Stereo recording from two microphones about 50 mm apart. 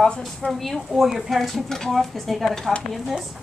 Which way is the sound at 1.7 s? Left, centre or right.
Centre.